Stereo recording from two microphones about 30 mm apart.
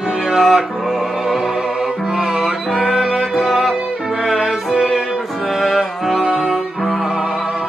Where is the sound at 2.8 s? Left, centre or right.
Centre.